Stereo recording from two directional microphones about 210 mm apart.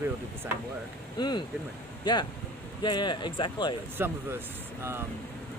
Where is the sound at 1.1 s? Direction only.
20° left (ahead or behind).